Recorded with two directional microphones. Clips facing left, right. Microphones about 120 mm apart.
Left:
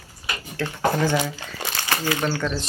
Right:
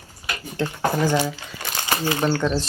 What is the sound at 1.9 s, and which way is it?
Speech, 25° right (ahead or behind).